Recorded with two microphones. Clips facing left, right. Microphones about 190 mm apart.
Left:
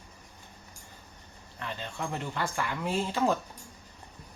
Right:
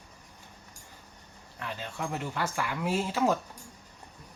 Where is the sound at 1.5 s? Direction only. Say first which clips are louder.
Even; 5° right (ahead or behind).